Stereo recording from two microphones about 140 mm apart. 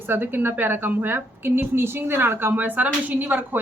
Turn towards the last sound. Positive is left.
turn(degrees=-10)  # may be behind; listen again after turning